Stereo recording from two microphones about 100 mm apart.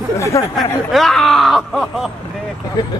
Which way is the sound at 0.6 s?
Centre (ahead or behind).